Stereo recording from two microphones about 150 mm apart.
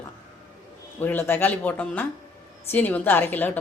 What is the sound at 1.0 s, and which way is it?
A woman's voice, 15° left (ahead or behind).